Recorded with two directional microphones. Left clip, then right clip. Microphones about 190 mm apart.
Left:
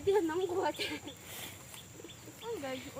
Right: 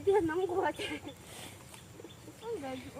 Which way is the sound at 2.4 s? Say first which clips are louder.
Right 1 dB; 45° right (ahead or behind).